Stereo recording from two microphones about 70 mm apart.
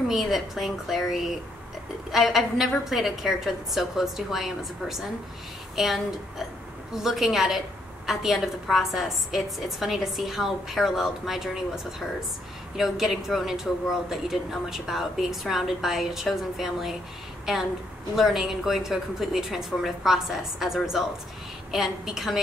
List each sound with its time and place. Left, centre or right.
0.1 s speech: centre